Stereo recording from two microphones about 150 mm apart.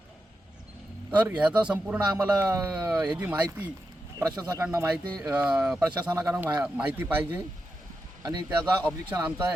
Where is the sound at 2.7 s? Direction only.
10° right (ahead or behind).